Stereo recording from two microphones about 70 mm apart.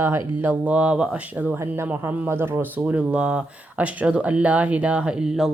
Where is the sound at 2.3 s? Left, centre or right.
Right.